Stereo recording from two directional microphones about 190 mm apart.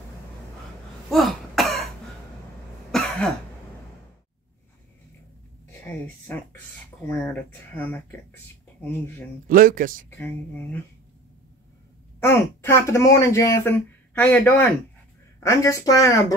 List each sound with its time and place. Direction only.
1.1 s throat clearing: centre (ahead or behind)
2.9 s cough: centre (ahead or behind)
5.7 s a sound: 10° left (ahead or behind)
7.0 s speech: 10° left (ahead or behind)
9.5 s speech: 45° right (ahead or behind)
10.0 s speech: 10° left (ahead or behind)
12.2 s speech: 15° left (ahead or behind)